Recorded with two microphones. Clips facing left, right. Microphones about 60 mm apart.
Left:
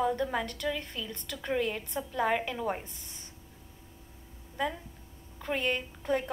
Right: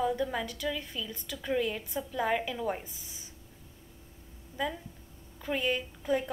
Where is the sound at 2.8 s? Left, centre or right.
Centre.